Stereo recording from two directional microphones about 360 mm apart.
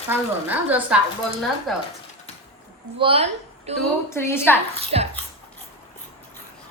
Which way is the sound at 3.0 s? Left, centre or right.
Centre.